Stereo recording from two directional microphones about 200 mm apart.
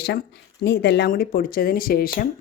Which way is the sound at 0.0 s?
55° left (ahead or behind).